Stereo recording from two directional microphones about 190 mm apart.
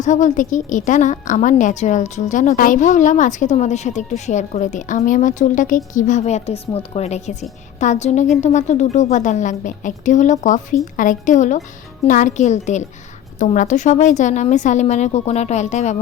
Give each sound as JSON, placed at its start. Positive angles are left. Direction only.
{"t": 0.0, "sound": "a woman's voice", "side_deg": 40}